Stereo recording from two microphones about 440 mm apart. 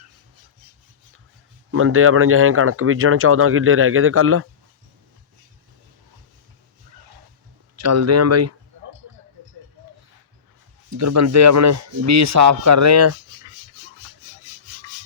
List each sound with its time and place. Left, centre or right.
1.7 s speech: right
7.8 s speech: right
10.9 s speech: right